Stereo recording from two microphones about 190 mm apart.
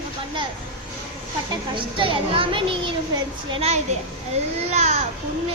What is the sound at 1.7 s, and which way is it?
A child's voice, 25° right (ahead or behind).